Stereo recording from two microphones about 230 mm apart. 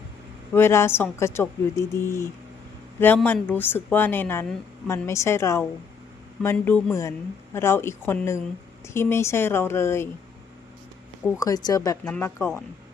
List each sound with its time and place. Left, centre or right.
0.5 s a woman's voice: centre
11.3 s a woman's voice: centre